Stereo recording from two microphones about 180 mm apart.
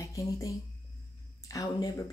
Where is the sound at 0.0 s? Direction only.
15° left (ahead or behind).